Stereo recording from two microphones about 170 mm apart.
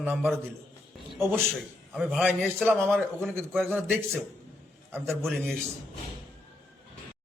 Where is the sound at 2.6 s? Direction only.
15° right (ahead or behind).